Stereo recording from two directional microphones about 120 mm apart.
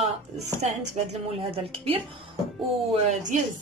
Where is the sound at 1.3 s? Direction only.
55° right (ahead or behind).